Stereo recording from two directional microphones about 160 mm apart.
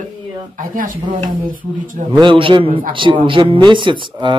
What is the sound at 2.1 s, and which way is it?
Speech, 30° right (ahead or behind).